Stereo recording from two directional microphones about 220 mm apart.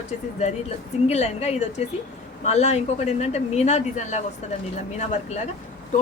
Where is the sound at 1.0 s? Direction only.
30° left (ahead or behind).